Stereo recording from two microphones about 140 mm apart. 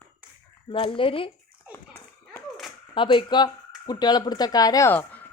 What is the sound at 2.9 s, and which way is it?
A woman's voice, 35° left (ahead or behind).